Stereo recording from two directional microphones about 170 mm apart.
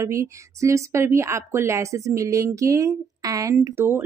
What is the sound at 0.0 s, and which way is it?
A woman's voice, 15° right (ahead or behind).